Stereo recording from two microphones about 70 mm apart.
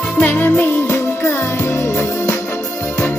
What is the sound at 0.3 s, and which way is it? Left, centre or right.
Music, left.